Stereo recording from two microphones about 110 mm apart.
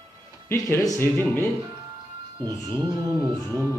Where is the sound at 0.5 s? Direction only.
35° left (ahead or behind).